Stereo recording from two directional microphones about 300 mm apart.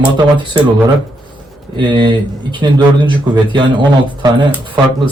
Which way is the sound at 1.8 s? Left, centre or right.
Centre.